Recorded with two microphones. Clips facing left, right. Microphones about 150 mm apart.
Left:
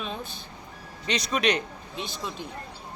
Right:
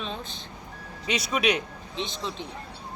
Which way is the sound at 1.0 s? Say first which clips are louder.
Even; 10° right (ahead or behind).